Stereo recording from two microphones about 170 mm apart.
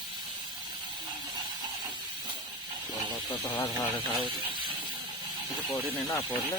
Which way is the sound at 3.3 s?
25° left (ahead or behind).